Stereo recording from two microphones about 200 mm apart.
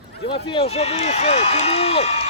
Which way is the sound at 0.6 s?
30° left (ahead or behind).